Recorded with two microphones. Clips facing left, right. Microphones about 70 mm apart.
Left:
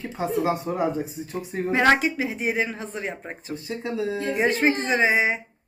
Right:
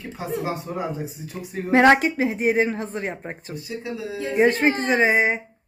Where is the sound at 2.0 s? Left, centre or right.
Right.